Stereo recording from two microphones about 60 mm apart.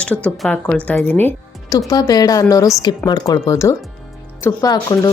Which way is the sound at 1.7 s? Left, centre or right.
Left.